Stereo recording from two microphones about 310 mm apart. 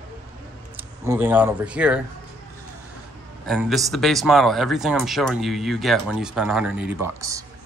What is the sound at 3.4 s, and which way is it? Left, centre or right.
Speech, centre.